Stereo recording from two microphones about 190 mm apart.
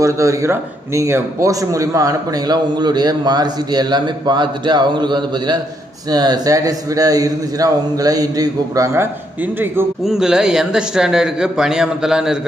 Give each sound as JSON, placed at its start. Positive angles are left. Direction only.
{"t": 0.0, "sound": "a man's voice", "side_deg": -15}